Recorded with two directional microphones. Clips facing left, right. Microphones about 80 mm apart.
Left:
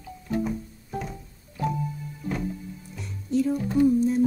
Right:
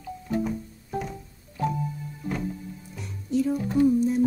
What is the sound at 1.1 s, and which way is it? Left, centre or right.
Organ, centre.